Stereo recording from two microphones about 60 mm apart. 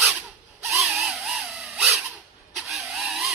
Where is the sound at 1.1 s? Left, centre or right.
Centre.